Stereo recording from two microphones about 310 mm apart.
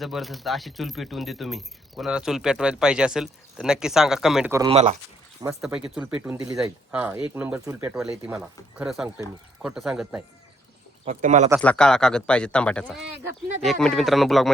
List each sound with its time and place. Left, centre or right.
0.0 s speech: centre
5.4 s speech: centre
11.0 s speech: right
11.6 s speech: centre